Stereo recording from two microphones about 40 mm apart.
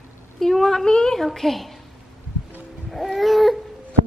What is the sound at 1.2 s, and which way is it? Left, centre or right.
Speech, centre.